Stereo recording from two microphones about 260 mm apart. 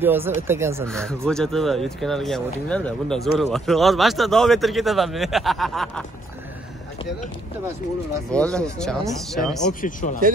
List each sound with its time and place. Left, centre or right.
0.0 s speech: centre
0.8 s speech: centre
8.3 s speech: centre
9.8 s speech: left